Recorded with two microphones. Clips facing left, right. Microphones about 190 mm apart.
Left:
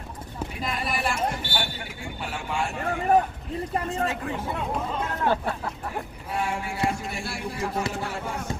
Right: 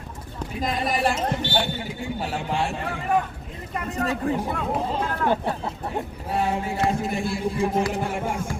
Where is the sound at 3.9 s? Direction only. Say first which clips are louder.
Right 4 dB; 35° right (ahead or behind).